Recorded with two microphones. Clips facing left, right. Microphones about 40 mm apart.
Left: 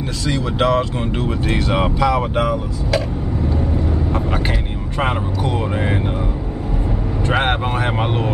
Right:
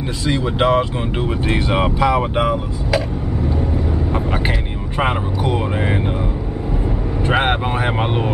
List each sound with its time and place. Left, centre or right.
0.3 s speech: centre
3.4 s vehicle: centre
7.2 s speech: centre